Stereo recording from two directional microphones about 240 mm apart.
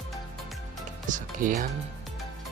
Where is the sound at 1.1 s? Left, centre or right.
Right.